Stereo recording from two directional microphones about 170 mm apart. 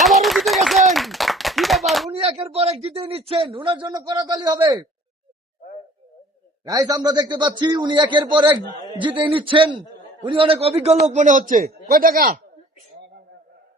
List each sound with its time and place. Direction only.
0.0 s clapping: centre (ahead or behind)
2.0 s a man's voice: 35° right (ahead or behind)
6.7 s a man's voice: 20° right (ahead or behind); by 12.4 s 60° right (ahead or behind)